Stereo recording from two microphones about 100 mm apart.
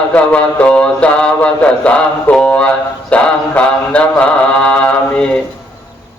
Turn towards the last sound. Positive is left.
turn(degrees=10)  # may be behind; listen again after turning